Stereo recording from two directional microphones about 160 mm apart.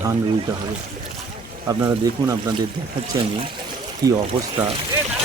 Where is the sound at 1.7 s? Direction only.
20° right (ahead or behind).